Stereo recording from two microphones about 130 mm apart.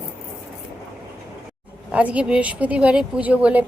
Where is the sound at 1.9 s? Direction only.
10° right (ahead or behind).